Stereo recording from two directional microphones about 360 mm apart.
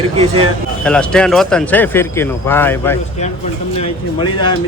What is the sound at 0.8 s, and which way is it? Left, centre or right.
Speech, centre.